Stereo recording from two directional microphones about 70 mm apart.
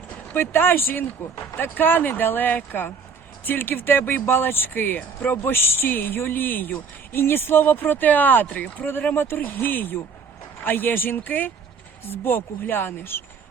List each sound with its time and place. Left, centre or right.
0.3 s speech: left